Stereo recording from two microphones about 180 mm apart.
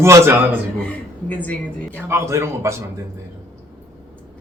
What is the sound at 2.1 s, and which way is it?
Speech, 15° right (ahead or behind).